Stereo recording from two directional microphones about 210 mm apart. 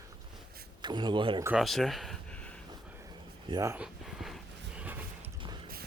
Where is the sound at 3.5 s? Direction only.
15° right (ahead or behind).